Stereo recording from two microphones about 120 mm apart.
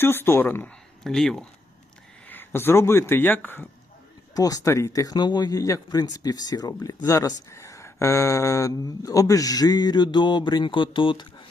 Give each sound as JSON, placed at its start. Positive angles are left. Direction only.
{"t": 0.0, "sound": "speech", "side_deg": 20}
{"t": 1.0, "sound": "speech", "side_deg": 5}
{"t": 2.2, "sound": "speech", "side_deg": 15}
{"t": 4.4, "sound": "speech", "side_deg": 30}